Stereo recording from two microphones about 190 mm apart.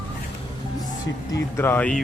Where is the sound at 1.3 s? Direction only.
15° left (ahead or behind).